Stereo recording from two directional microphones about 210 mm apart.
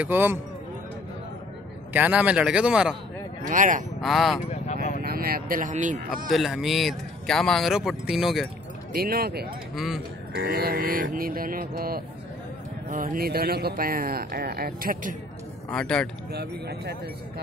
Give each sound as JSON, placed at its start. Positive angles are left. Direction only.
{"t": 0.0, "sound": "speech", "side_deg": -10}
{"t": 2.0, "sound": "speech", "side_deg": -5}
{"t": 3.4, "sound": "speech", "side_deg": -40}
{"t": 4.0, "sound": "speech", "side_deg": 0}
{"t": 5.0, "sound": "speech", "side_deg": -45}
{"t": 6.3, "sound": "speech", "side_deg": 0}
{"t": 8.9, "sound": "speech", "side_deg": -45}
{"t": 15.7, "sound": "speech", "side_deg": 5}
{"t": 16.3, "sound": "speech", "side_deg": -50}